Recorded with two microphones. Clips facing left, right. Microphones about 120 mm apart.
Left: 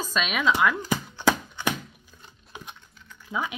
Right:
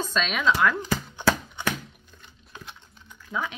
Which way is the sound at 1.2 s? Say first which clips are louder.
Left 1 dB; 15° left (ahead or behind).